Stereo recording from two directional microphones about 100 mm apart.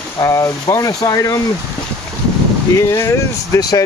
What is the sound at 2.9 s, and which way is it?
Speech, 30° left (ahead or behind).